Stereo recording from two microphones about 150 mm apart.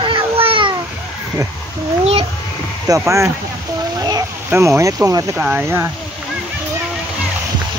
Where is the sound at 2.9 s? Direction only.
20° right (ahead or behind).